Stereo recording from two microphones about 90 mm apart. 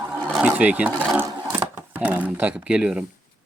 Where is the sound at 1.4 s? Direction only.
25° right (ahead or behind).